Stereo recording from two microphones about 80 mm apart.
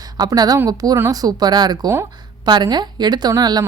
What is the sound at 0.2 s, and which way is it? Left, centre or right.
Speech, right.